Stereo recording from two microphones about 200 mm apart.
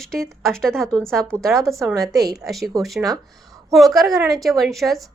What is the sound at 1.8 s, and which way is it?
Speech, 20° right (ahead or behind).